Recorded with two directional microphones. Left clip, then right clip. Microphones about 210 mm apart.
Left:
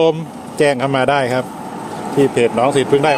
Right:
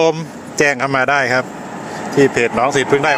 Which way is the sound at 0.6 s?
5° left (ahead or behind).